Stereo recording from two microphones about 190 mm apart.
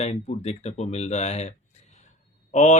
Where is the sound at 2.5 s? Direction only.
40° left (ahead or behind).